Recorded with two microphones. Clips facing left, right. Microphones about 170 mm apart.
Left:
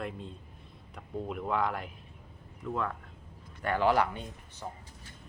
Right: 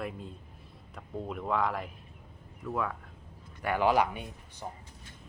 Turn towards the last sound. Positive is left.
turn(degrees=-15)  # may be behind; listen again after turning